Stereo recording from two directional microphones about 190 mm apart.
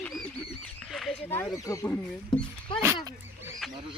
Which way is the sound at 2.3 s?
25° left (ahead or behind).